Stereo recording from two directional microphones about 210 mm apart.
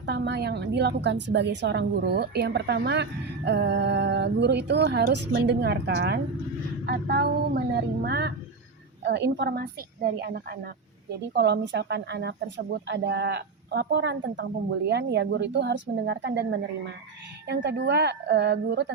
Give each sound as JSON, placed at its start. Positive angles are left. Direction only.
{"t": 0.0, "sound": "a woman's voice", "side_deg": -55}
{"t": 8.0, "sound": "a sound", "side_deg": -50}
{"t": 9.0, "sound": "a woman's voice", "side_deg": -55}